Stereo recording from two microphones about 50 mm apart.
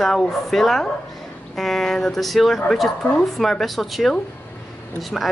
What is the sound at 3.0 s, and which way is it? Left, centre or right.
Speech, left.